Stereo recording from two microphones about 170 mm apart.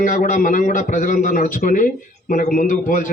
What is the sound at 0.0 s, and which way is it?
A man's voice, 50° left (ahead or behind).